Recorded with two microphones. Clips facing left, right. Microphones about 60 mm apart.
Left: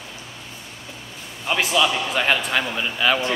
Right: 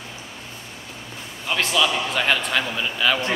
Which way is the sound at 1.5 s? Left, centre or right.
Centre.